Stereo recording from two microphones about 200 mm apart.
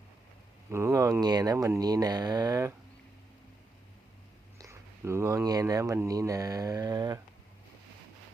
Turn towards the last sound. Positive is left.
turn(degrees=-20)  # may be behind; listen again after turning